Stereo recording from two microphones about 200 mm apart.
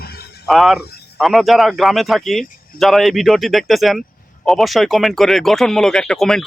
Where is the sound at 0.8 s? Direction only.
55° left (ahead or behind).